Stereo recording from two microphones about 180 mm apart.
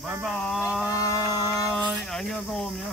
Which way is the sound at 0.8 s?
20° left (ahead or behind).